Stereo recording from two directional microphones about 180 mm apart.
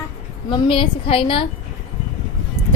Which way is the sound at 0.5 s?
30° left (ahead or behind).